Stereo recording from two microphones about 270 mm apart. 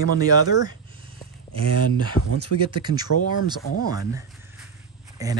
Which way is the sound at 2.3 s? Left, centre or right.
Right.